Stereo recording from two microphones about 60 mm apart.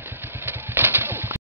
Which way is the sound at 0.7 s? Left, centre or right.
Right.